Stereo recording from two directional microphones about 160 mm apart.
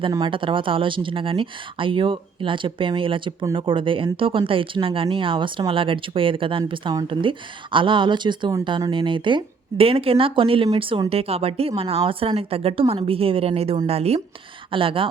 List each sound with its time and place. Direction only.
0.1 s speech: 30° right (ahead or behind)